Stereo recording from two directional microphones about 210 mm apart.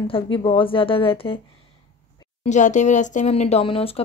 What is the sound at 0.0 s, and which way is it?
Speech, 25° left (ahead or behind).